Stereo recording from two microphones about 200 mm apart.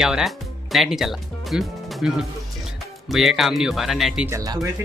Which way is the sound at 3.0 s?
Centre (ahead or behind).